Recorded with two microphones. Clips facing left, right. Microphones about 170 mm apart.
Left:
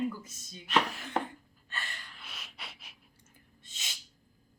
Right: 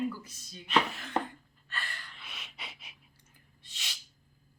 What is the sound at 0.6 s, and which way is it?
Speech, centre (ahead or behind).